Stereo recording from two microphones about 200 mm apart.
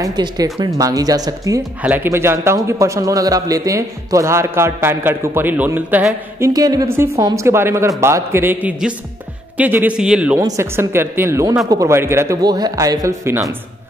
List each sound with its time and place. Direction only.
0.0 s speech: 20° right (ahead or behind)